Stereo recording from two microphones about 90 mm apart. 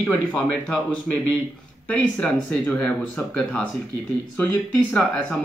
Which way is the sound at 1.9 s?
15° left (ahead or behind).